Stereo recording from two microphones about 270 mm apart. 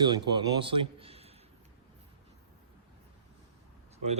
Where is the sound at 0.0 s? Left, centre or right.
Centre.